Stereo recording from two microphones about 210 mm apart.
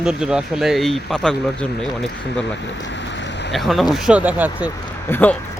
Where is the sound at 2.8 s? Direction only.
60° left (ahead or behind).